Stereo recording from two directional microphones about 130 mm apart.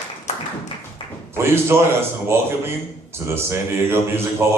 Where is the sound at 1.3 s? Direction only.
20° right (ahead or behind).